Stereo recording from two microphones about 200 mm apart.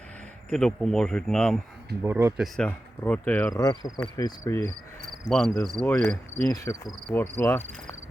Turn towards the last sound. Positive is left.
turn(degrees=10)  # may be behind; listen again after turning